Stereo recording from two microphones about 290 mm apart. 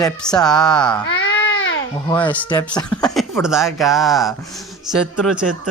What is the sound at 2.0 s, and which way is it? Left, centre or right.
Speech, centre.